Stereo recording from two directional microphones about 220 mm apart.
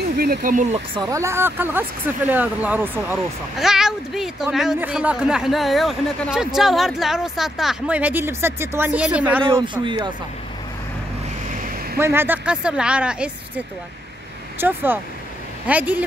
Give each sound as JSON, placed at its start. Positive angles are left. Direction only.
{"t": 0.2, "sound": "speech", "side_deg": -40}
{"t": 0.9, "sound": "speech", "side_deg": -15}
{"t": 9.4, "sound": "speech", "side_deg": -20}
{"t": 11.5, "sound": "vehicle", "side_deg": -40}
{"t": 12.0, "sound": "speech", "side_deg": -10}
{"t": 14.6, "sound": "speech", "side_deg": -10}